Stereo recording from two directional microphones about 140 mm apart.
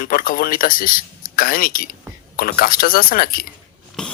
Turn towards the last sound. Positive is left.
turn(degrees=5)  # may be behind; listen again after turning